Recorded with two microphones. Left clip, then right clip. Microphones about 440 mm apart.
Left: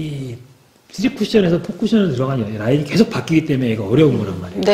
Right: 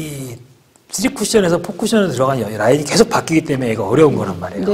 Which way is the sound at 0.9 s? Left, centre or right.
Right.